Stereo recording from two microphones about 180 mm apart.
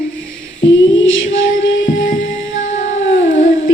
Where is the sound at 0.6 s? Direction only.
90° left.